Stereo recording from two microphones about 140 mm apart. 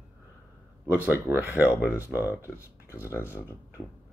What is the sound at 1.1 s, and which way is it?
Speech, 15° right (ahead or behind).